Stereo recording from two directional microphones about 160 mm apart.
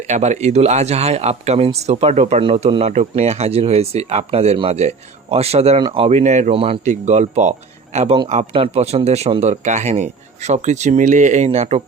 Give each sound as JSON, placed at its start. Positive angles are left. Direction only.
{"t": 0.1, "sound": "speech", "side_deg": -45}
{"t": 6.9, "sound": "speech", "side_deg": -45}